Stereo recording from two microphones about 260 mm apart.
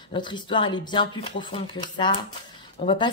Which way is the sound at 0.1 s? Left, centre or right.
Centre.